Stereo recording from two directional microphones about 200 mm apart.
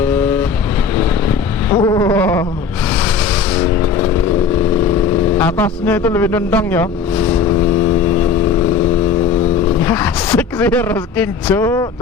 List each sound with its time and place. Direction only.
0.0 s vehicle: 5° left (ahead or behind)
1.7 s a sound: 20° left (ahead or behind)
3.5 s vehicle: 10° left (ahead or behind)
5.4 s speech: 5° left (ahead or behind)
9.8 s speech: 10° left (ahead or behind)